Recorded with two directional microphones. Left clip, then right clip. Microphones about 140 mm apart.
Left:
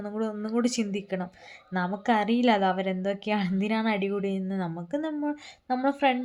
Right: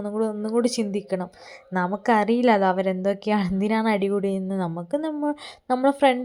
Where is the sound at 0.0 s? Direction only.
25° right (ahead or behind).